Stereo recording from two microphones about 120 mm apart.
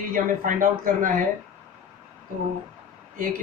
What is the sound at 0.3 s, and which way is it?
Speech, 90° right.